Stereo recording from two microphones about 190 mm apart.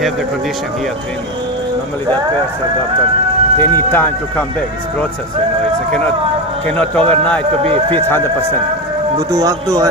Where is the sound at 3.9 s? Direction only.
5° left (ahead or behind).